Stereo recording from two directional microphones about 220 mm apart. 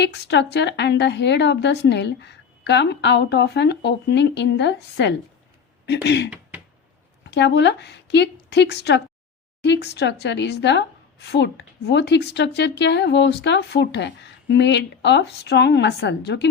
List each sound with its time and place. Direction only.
0.0 s a woman's voice: 50° left (ahead or behind)